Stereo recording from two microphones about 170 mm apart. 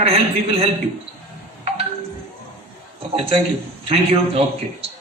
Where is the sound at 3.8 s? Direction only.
35° right (ahead or behind).